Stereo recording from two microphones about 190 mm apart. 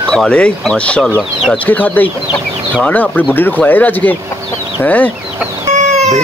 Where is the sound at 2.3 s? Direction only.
5° left (ahead or behind).